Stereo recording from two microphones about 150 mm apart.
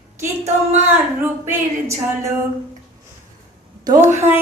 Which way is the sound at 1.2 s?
15° right (ahead or behind).